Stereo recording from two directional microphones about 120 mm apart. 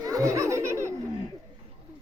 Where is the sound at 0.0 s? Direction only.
25° right (ahead or behind).